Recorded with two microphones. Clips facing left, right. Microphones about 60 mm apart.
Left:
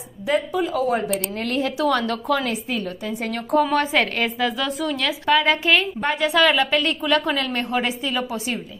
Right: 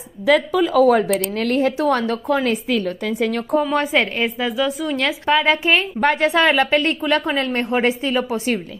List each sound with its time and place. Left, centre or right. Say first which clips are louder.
0.3 s speech: right 6 dB; right
1.3 s a woman's voice: right 5 dB; right
2.8 s a woman's voice: right 6 dB; right
3.7 s a woman's voice: right 1 dB; right; by 4.9 s centre
4.9 s a woman's voice: right 1 dB; right